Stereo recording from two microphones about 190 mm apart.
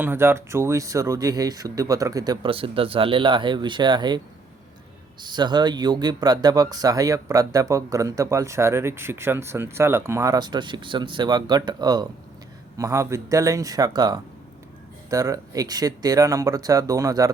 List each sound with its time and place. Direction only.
0.0 s speech: 10° right (ahead or behind)
5.2 s speech: 25° right (ahead or behind)